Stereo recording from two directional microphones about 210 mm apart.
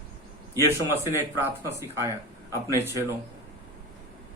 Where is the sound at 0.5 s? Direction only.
10° right (ahead or behind).